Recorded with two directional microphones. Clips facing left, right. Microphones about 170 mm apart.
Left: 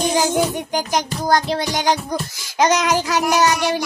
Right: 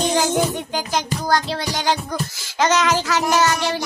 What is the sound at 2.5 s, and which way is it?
A woman's voice, 15° left (ahead or behind).